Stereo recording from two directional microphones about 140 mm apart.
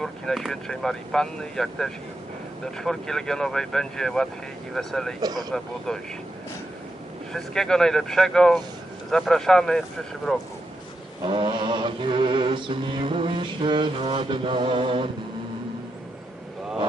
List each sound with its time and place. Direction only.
0.0 s speech: centre (ahead or behind)
5.2 s speech: 30° right (ahead or behind)
5.5 s speech: 5° left (ahead or behind)
7.3 s speech: 5° left (ahead or behind)
11.3 s mantra: 35° right (ahead or behind)